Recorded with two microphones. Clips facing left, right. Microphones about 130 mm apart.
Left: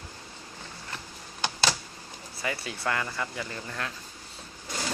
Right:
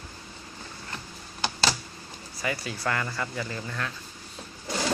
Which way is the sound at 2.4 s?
25° left (ahead or behind).